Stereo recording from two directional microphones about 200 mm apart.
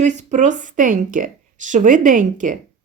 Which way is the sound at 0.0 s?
35° right (ahead or behind).